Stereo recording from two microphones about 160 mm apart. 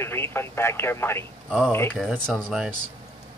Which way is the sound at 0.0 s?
15° left (ahead or behind).